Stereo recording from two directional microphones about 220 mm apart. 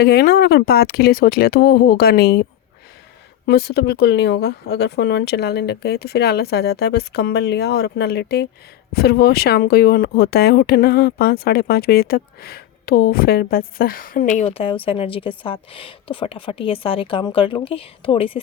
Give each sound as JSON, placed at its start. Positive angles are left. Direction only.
{"t": 0.0, "sound": "a woman's voice", "side_deg": 45}